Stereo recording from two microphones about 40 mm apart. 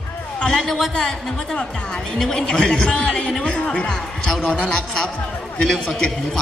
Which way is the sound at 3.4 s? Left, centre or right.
Left.